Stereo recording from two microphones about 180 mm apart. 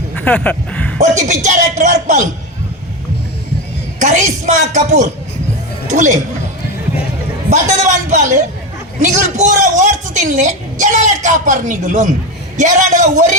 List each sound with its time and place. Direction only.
0.2 s speech: 5° left (ahead or behind)
0.9 s speech: 40° right (ahead or behind)
4.0 s a man's voice: 45° right (ahead or behind)
7.5 s a man's voice: 40° right (ahead or behind)